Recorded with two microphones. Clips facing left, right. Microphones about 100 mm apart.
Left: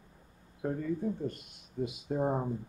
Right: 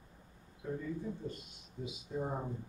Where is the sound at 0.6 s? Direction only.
60° left (ahead or behind).